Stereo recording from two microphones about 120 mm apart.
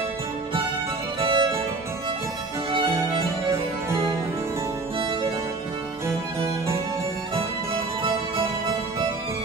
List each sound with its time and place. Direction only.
1.2 s music: 45° right (ahead or behind)
2.7 s music: 50° right (ahead or behind)